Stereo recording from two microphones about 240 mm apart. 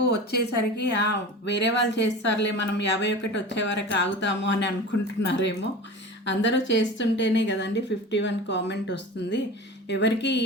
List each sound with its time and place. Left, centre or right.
0.3 s a woman's voice: left